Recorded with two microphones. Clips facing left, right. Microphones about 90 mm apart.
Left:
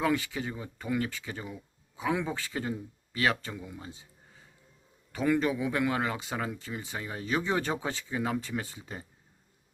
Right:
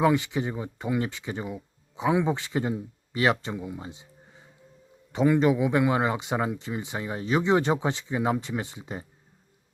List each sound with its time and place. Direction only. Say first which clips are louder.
0.0 s speech: right 6 dB; 20° right (ahead or behind)
5.1 s speech: right 6 dB; 20° right (ahead or behind)